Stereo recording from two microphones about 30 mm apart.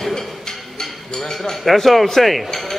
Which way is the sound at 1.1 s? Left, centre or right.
Centre.